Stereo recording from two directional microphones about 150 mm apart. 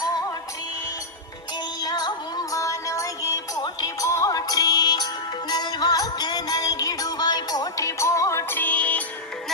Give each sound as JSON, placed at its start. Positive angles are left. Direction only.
{"t": 1.8, "sound": "music", "side_deg": 25}